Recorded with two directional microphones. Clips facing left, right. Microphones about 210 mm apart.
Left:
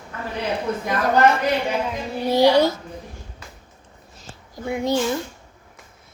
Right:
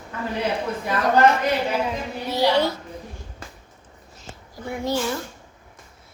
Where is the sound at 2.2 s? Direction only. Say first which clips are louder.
Left 5 dB; 40° left (ahead or behind).